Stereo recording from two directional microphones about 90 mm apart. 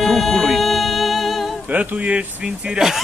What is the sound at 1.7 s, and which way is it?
Speech, 15° right (ahead or behind).